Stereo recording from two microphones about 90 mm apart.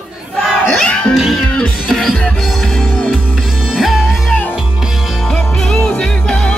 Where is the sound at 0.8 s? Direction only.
10° left (ahead or behind).